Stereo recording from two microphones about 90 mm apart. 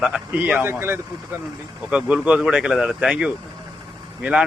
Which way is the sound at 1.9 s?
10° right (ahead or behind).